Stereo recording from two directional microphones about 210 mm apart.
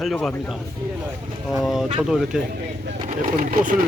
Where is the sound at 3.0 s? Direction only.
35° right (ahead or behind).